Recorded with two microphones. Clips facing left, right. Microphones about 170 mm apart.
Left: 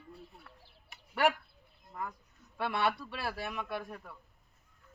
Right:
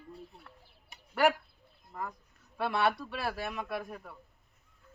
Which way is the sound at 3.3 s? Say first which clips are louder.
Right 1 dB; centre (ahead or behind).